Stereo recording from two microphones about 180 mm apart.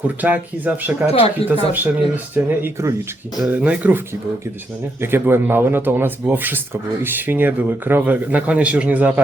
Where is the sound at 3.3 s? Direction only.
5° right (ahead or behind).